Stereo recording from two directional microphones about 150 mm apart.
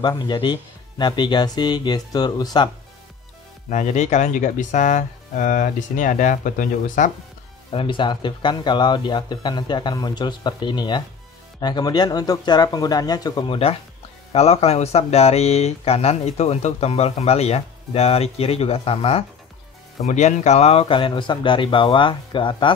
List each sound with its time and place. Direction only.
0.0 s speech: 30° left (ahead or behind)
3.7 s speech: 50° left (ahead or behind)
7.7 s speech: 35° left (ahead or behind)
20.1 s speech: 50° left (ahead or behind); by 22.7 s 35° left (ahead or behind)